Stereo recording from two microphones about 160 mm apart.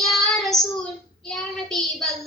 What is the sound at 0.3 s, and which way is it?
Child singing, centre (ahead or behind).